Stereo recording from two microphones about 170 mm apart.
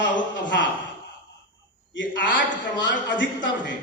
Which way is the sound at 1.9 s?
90° left.